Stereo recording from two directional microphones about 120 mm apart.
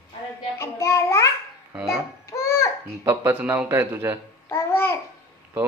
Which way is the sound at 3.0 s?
15° right (ahead or behind).